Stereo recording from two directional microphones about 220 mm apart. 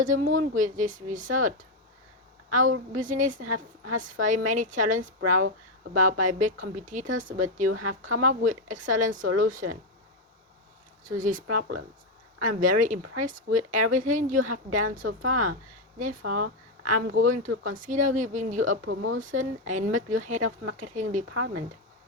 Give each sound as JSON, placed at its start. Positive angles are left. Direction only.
{"t": 0.0, "sound": "a woman's voice", "side_deg": -35}
{"t": 3.4, "sound": "a woman's voice", "side_deg": -75}
{"t": 3.9, "sound": "a woman's voice", "side_deg": -35}
{"t": 7.7, "sound": "speech", "side_deg": -85}
{"t": 8.4, "sound": "a woman's voice", "side_deg": -35}
{"t": 11.0, "sound": "a woman's voice", "side_deg": -35}
{"t": 11.4, "sound": "speech", "side_deg": -90}
{"t": 12.4, "sound": "a woman's voice", "side_deg": -40}
{"t": 16.2, "sound": "speech", "side_deg": -90}
{"t": 16.8, "sound": "a woman's voice", "side_deg": -35}
{"t": 18.9, "sound": "speech", "side_deg": -65}
{"t": 19.2, "sound": "a woman's voice", "side_deg": -35}
{"t": 21.3, "sound": "speech", "side_deg": -90}